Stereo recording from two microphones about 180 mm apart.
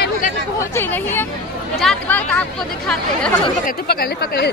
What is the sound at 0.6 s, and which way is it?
Speech, 10° left (ahead or behind).